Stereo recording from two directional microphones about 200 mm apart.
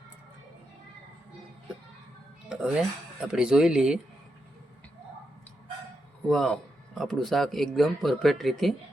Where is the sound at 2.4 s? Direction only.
5° right (ahead or behind).